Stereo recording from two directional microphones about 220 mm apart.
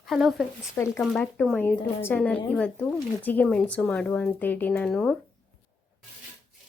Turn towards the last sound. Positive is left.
turn(degrees=5)  # may be behind; listen again after turning